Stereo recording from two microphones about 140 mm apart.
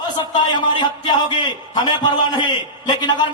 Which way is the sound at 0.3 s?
30° left (ahead or behind).